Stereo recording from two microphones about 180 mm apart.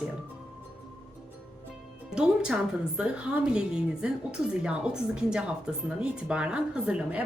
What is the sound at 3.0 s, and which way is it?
A woman's voice, 5° right (ahead or behind).